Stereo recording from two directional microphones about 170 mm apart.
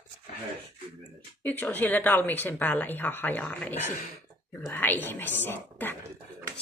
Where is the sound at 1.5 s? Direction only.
10° left (ahead or behind).